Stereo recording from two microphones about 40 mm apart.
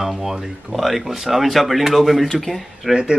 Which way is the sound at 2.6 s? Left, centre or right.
Centre.